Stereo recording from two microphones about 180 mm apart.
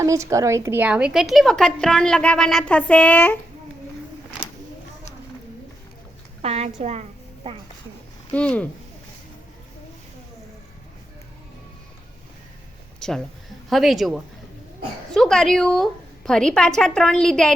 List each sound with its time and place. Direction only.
0.0 s a woman's voice: 15° right (ahead or behind); by 3.3 s 10° left (ahead or behind)
6.4 s a woman's voice: 35° right (ahead or behind)
8.3 s speech: 5° left (ahead or behind)
13.0 s a woman's voice: 5° left (ahead or behind)